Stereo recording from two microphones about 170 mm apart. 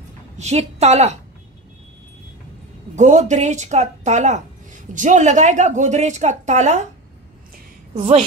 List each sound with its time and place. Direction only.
0.4 s a woman's voice: 40° right (ahead or behind)
3.0 s a woman's voice: 45° right (ahead or behind)
7.9 s a woman's voice: 40° right (ahead or behind)